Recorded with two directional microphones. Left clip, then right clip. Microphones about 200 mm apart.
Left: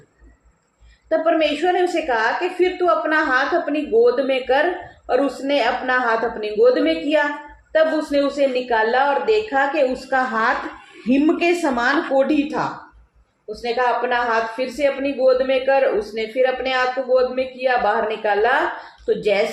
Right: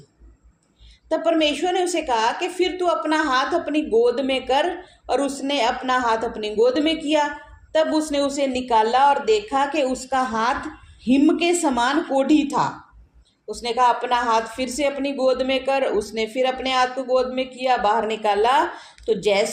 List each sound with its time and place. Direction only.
1.1 s a woman's voice: 35° right (ahead or behind)